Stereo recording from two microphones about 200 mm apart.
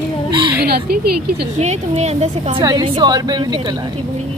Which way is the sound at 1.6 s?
35° right (ahead or behind).